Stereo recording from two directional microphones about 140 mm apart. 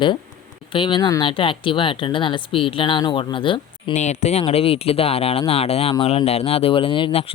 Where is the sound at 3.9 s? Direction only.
55° left (ahead or behind).